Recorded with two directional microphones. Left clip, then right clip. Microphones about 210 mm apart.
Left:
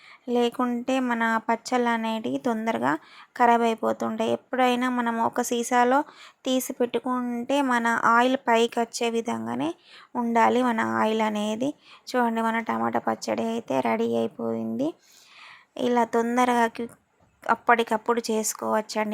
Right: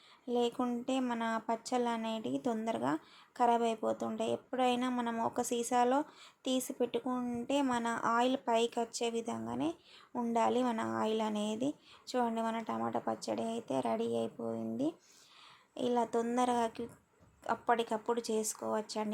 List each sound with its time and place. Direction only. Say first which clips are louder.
0.3 s speech: left 9 dB; 20° left (ahead or behind)